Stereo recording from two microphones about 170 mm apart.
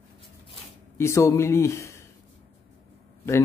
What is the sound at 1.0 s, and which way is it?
Speech, 15° left (ahead or behind).